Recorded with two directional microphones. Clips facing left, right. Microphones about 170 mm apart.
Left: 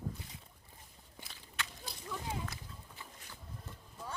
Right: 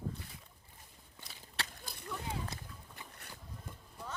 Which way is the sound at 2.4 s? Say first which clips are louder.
Even; 20° right (ahead or behind).